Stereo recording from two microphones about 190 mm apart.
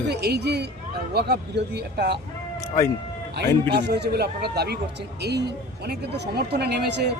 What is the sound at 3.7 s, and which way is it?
Speech, 60° right (ahead or behind).